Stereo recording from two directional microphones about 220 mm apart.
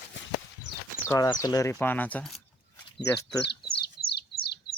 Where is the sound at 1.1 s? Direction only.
15° left (ahead or behind).